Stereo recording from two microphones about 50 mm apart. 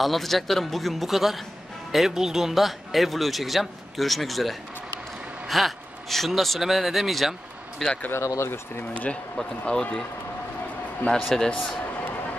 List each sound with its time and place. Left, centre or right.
0.0 s speech: centre
8.1 s speech: left
8.9 s speech: left
11.0 s a man's voice: left
11.3 s a man's voice: centre